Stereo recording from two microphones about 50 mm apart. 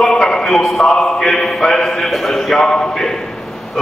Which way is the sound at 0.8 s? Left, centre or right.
Centre.